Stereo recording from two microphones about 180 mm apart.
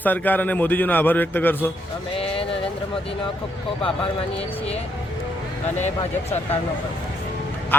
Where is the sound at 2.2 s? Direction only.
30° left (ahead or behind).